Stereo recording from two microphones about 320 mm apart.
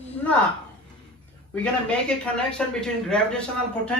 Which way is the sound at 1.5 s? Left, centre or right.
Centre.